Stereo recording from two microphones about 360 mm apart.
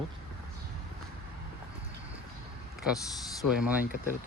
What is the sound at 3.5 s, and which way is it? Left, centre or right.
Speech, centre.